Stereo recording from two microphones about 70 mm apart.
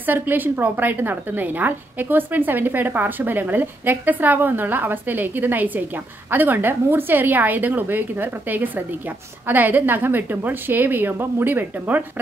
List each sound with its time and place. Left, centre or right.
0.0 s a woman's voice: right